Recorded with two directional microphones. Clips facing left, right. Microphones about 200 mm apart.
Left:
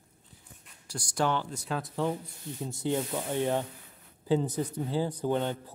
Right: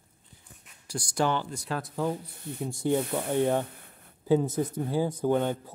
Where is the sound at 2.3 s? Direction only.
55° right (ahead or behind).